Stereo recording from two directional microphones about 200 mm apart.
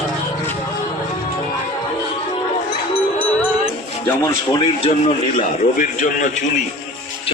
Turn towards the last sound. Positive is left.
turn(degrees=40)  # may be behind; listen again after turning